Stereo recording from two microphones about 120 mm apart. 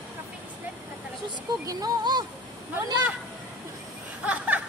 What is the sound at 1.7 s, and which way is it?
Speech, 35° right (ahead or behind).